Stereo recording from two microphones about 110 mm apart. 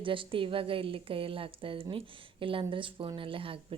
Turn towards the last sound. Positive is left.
turn(degrees=-55)  # may be behind; listen again after turning